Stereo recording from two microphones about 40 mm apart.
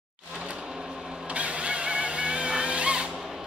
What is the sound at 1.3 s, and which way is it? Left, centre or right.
Vehicle, right.